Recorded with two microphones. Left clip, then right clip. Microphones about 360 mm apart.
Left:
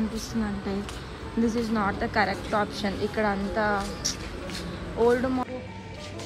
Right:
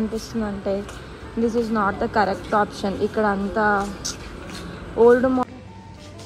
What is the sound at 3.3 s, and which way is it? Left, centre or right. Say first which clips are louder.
Speech: right 6 dB; right.